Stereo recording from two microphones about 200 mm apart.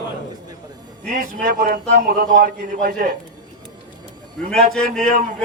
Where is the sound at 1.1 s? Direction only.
45° right (ahead or behind).